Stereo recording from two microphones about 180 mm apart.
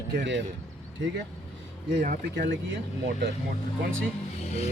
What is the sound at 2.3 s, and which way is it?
Speech, 85° right.